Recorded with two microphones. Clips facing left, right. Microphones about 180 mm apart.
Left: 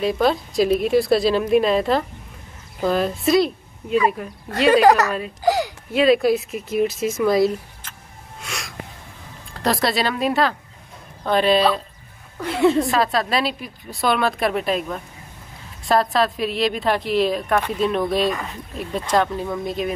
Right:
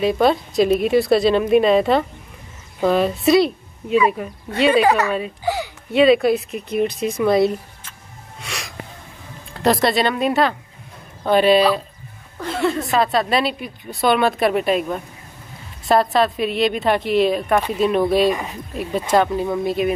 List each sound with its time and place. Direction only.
0.0 s a woman's voice: centre (ahead or behind)
4.7 s speech: 40° left (ahead or behind)
5.4 s a sound: 40° left (ahead or behind)
5.9 s a woman's voice: centre (ahead or behind)
8.4 s a sound: centre (ahead or behind)
9.5 s a woman's voice: centre (ahead or behind)
12.4 s a woman's voice: 10° left (ahead or behind)
12.8 s a woman's voice: centre (ahead or behind)
18.3 s speech: 15° right (ahead or behind)
18.8 s a woman's voice: 5° right (ahead or behind)